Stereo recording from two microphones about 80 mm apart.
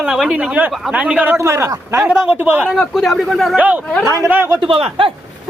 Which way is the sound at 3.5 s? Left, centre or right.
Centre.